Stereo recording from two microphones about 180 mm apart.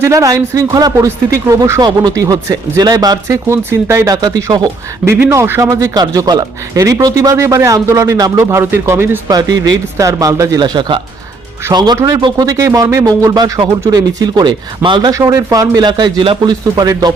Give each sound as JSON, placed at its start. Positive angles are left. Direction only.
{"t": 0.0, "sound": "speech", "side_deg": -20}